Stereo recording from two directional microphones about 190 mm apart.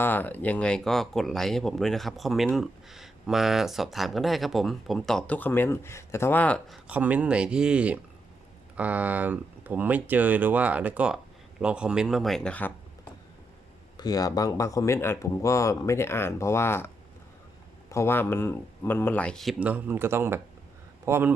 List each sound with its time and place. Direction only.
0.0 s speech: 10° left (ahead or behind)
6.8 s speech: 10° right (ahead or behind)
13.9 s speech: 20° left (ahead or behind)
17.9 s speech: 10° left (ahead or behind); by 21.3 s 10° right (ahead or behind)